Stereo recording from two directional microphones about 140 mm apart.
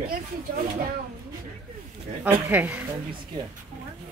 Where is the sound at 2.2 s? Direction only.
10° right (ahead or behind).